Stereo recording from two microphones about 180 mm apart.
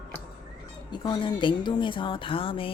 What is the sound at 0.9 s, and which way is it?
A woman's voice, 25° left (ahead or behind).